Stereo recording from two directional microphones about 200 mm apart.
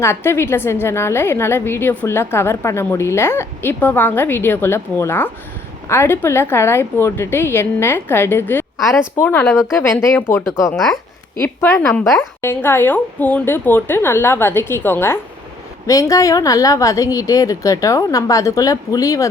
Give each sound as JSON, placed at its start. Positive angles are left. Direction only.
{"t": 0.0, "sound": "a woman's voice", "side_deg": 10}
{"t": 8.8, "sound": "speech", "side_deg": 0}
{"t": 9.1, "sound": "a woman's voice", "side_deg": 10}